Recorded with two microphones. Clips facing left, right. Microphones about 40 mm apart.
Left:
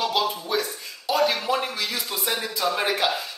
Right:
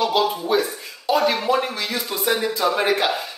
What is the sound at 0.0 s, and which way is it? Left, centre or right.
Speech, centre.